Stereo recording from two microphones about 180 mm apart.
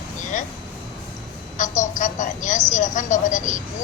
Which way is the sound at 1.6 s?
45° left (ahead or behind).